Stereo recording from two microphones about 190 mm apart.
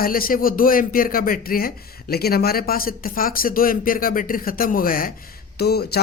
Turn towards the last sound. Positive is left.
turn(degrees=55)  # may be behind; listen again after turning